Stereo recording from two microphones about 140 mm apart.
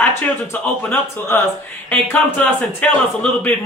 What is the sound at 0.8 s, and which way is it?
Speech, 15° left (ahead or behind).